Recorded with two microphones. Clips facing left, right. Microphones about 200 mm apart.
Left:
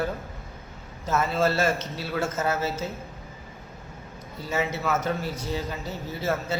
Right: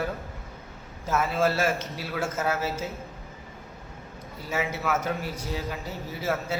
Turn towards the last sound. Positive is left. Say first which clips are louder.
# left 1 dB
turn(degrees=-10)  # may be behind; listen again after turning